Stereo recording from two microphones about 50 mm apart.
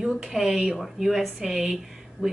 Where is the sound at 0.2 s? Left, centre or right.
Centre.